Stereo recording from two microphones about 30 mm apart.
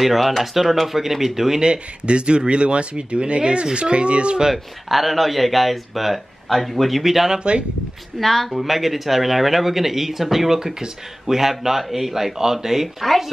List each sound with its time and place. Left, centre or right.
0.0 s speech: centre
1.6 s speech: right
4.5 s speech: centre
7.3 s speech: right
8.2 s speech: centre